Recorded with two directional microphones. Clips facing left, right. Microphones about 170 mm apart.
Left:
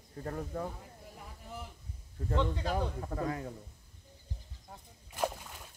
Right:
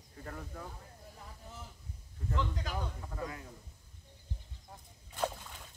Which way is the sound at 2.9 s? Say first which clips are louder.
Left 7 dB; 50° left (ahead or behind).